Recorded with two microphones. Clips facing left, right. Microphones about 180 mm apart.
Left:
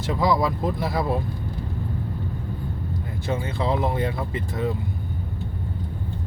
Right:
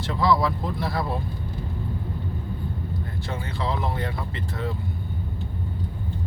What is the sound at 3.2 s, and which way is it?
Speech, 20° left (ahead or behind).